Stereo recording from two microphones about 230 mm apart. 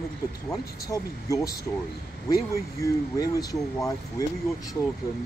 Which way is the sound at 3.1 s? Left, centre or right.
Centre.